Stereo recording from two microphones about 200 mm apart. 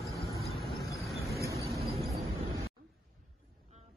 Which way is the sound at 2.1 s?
30° right (ahead or behind).